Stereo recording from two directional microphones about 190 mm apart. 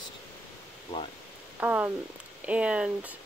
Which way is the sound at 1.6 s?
10° right (ahead or behind).